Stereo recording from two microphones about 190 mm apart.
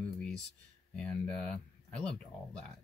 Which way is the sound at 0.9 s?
5° left (ahead or behind).